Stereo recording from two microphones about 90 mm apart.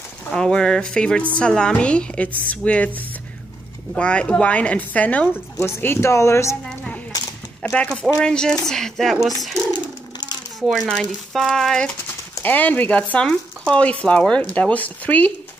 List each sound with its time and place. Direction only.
0.3 s speech: 10° left (ahead or behind)
5.6 s speech: 25° left (ahead or behind)
7.7 s speech: 10° left (ahead or behind)
10.7 s speech: centre (ahead or behind)
12.4 s speech: 20° left (ahead or behind)